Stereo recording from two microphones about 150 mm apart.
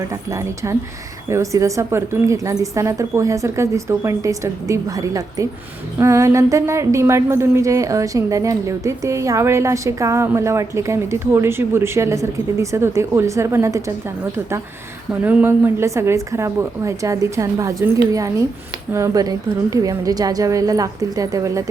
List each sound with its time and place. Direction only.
0.1 s a woman's voice: 20° right (ahead or behind)
15.2 s a woman's voice: 10° right (ahead or behind)